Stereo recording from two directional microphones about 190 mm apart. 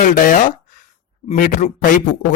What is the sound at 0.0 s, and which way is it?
A man's voice, 45° left (ahead or behind).